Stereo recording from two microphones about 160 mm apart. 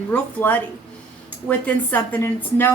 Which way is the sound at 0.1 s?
10° left (ahead or behind).